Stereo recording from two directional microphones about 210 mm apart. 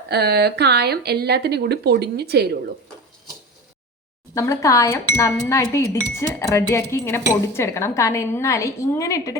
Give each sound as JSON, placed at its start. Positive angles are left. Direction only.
{"t": 0.1, "sound": "speech", "side_deg": -50}
{"t": 4.4, "sound": "speech", "side_deg": 15}